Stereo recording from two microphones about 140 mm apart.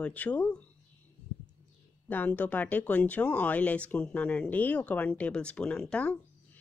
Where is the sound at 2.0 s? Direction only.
10° left (ahead or behind).